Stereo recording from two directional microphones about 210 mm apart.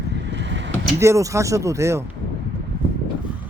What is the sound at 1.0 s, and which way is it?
Speech, 15° right (ahead or behind).